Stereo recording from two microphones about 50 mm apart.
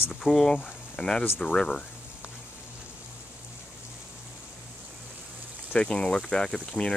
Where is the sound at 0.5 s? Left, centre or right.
Centre.